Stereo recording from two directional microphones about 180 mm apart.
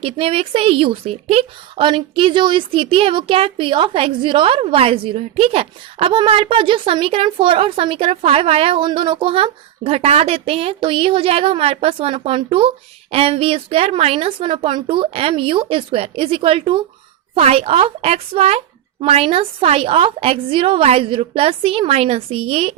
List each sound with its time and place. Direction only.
0.0 s a woman's voice: 30° right (ahead or behind)